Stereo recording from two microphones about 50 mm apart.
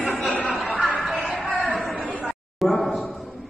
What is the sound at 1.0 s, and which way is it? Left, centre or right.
Music, centre.